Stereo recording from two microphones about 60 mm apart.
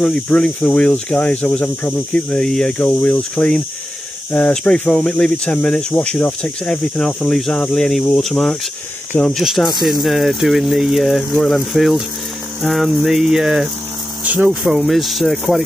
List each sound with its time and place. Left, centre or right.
0.3 s speech: centre
2.3 s speech: centre
2.8 s speech: left; by 13.7 s centre
14.2 s speech: right
14.5 s speech: centre
14.9 s speech: centre